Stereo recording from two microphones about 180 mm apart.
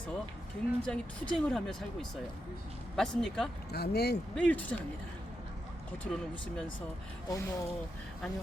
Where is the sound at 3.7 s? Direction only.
65° left (ahead or behind).